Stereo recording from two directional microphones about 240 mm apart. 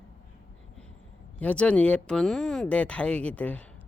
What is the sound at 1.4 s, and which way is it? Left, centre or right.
Speech, centre.